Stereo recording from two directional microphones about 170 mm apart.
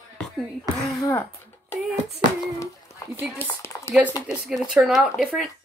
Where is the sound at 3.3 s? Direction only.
15° left (ahead or behind).